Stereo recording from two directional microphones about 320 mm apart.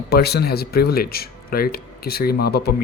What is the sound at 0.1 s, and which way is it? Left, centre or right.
Speech, left.